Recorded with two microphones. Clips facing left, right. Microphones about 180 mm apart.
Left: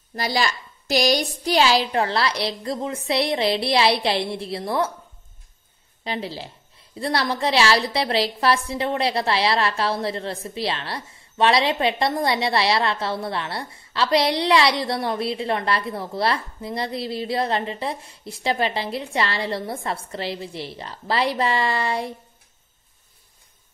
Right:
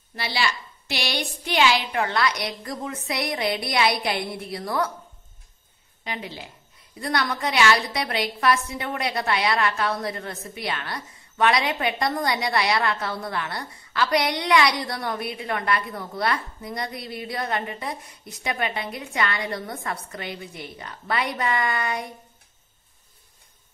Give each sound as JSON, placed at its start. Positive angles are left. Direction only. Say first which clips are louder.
{"t": 0.1, "sound": "a woman's voice", "louder": "left 3 dB", "side_deg": 40}
{"t": 6.0, "sound": "a woman's voice", "louder": "left 5 dB", "side_deg": 35}